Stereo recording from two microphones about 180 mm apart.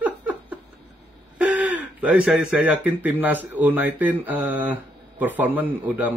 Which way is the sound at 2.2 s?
10° right (ahead or behind).